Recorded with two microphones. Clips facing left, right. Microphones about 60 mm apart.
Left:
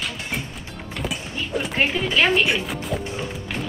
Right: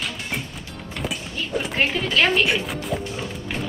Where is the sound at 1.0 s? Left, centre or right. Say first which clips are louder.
Even; centre.